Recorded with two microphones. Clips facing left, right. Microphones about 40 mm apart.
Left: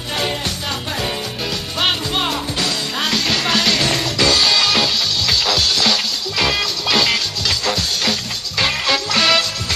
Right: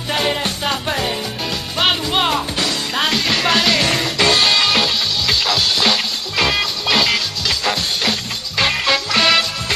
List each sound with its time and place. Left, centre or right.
0.4 s music: right
2.1 s music: right
4.2 s music: right
4.6 s music: centre
5.8 s music: centre
7.6 s music: centre